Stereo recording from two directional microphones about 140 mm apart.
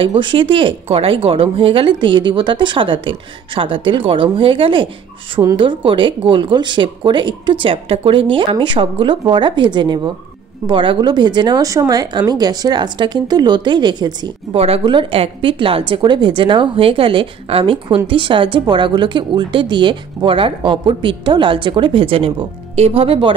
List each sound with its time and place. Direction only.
0.0 s a woman's voice: 35° right (ahead or behind)
14.5 s a woman's voice: 45° right (ahead or behind)